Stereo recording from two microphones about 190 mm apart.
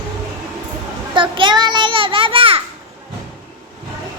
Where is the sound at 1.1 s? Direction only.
25° right (ahead or behind).